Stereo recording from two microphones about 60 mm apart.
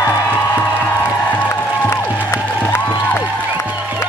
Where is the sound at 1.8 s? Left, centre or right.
Left.